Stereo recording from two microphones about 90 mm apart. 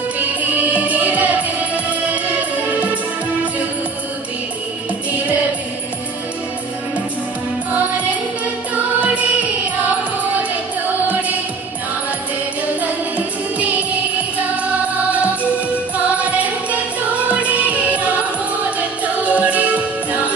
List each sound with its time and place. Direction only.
0.4 s music: 20° right (ahead or behind)
2.7 s music: 15° right (ahead or behind)
13.6 s music: 15° right (ahead or behind)
17.3 s music: 15° right (ahead or behind)
19.2 s music: 15° right (ahead or behind)